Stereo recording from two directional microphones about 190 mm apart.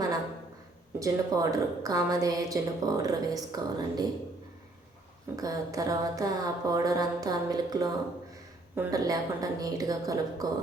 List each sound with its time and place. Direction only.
0.9 s a woman's voice: 20° right (ahead or behind)
5.4 s a woman's voice: 20° right (ahead or behind)